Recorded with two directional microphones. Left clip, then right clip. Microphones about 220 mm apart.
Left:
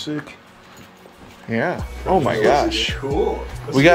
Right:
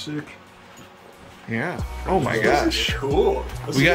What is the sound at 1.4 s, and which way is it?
Speech, 5° left (ahead or behind).